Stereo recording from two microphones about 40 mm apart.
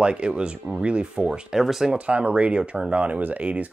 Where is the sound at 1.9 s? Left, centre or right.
Right.